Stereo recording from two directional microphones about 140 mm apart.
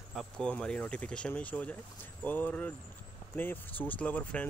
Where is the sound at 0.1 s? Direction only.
5° left (ahead or behind).